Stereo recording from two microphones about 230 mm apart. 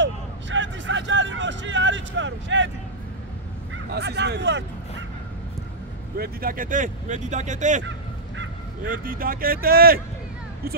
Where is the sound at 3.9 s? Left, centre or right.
Right.